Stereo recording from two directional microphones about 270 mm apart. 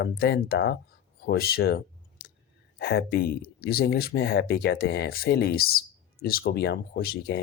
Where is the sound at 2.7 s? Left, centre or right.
Left.